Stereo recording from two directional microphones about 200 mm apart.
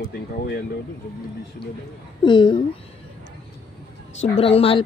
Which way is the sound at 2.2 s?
25° left (ahead or behind).